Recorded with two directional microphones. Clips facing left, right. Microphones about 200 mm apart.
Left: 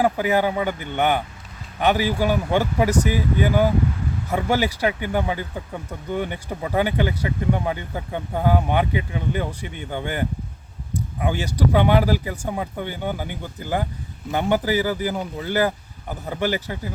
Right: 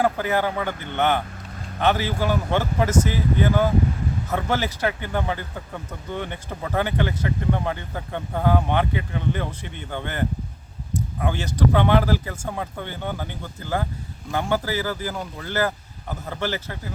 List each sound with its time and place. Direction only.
0.0 s speech: 15° left (ahead or behind)